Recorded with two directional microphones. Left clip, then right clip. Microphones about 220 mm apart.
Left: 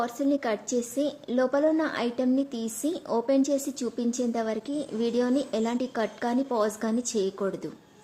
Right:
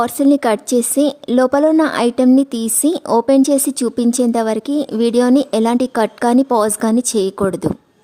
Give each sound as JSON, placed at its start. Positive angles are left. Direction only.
{"t": 0.0, "sound": "a woman's voice", "side_deg": -50}